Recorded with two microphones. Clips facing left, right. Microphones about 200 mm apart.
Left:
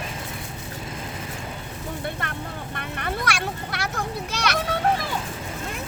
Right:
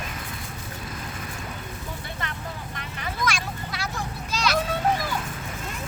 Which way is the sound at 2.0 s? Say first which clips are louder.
Left 4 dB; 55° left (ahead or behind).